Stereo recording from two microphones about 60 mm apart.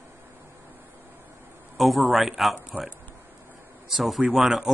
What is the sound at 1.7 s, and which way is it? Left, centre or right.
Speech, centre.